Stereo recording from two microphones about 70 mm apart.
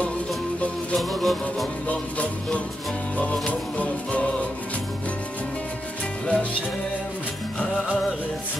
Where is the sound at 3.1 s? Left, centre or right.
Centre.